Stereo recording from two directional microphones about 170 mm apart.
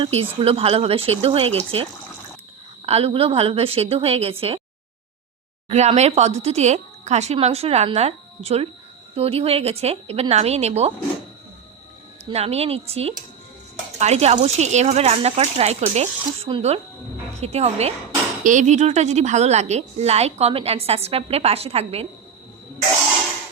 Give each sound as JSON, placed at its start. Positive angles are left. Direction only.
{"t": 0.0, "sound": "a woman's voice", "side_deg": -35}
{"t": 2.8, "sound": "a woman's voice", "side_deg": -35}
{"t": 5.6, "sound": "a woman's voice", "side_deg": -40}
{"t": 12.2, "sound": "a woman's voice", "side_deg": -40}